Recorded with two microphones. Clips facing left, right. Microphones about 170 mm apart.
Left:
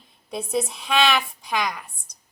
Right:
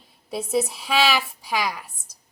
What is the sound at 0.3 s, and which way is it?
A woman's voice, 5° right (ahead or behind).